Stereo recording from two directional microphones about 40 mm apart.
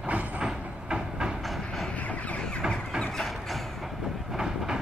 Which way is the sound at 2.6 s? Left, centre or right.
Centre.